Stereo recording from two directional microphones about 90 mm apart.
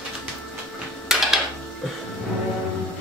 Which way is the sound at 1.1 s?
5° right (ahead or behind).